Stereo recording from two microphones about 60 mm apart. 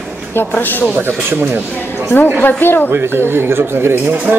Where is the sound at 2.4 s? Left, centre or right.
Left.